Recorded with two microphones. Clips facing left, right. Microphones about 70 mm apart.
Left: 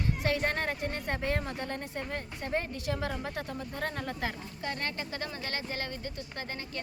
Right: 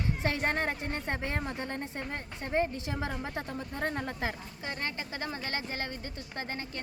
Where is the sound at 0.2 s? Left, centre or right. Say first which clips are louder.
Even; right.